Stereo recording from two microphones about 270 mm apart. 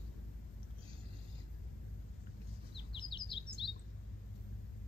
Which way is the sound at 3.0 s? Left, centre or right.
Centre.